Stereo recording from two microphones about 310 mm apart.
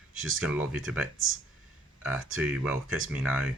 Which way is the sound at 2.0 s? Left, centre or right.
Centre.